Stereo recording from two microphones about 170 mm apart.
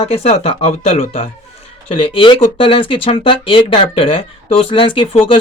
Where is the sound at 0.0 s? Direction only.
35° left (ahead or behind).